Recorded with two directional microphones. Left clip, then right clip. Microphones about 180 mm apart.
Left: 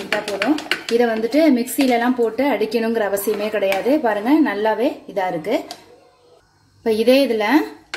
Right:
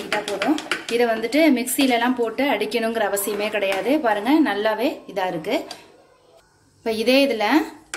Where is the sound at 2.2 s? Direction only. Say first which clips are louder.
Left 3 dB; 40° left (ahead or behind).